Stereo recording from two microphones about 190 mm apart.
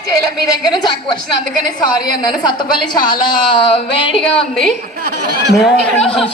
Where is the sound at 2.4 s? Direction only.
25° left (ahead or behind).